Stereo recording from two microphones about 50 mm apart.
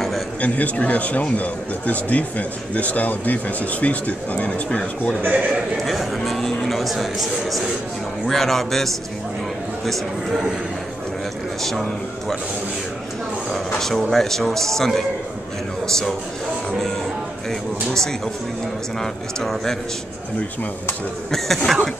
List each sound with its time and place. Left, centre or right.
0.4 s speech: left
5.2 s a man's voice: right
5.9 s speech: centre
13.7 s speech: centre
17.5 s speech: centre
21.3 s speech: centre